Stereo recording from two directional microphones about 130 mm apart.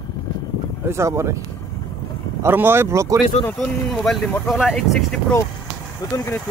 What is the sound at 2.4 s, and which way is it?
Speech, 15° right (ahead or behind).